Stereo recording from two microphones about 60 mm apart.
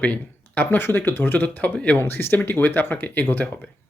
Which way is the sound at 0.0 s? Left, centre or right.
Left.